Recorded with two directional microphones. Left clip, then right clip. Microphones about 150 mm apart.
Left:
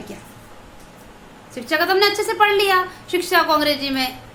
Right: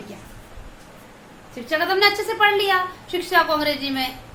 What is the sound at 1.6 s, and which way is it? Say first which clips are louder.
A woman's voice: left 1 dB; 35° left (ahead or behind).